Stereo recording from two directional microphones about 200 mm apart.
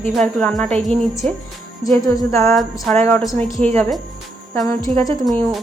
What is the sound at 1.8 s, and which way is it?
Speech, 15° left (ahead or behind).